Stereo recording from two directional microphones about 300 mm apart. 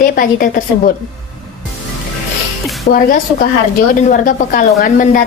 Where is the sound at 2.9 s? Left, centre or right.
Left.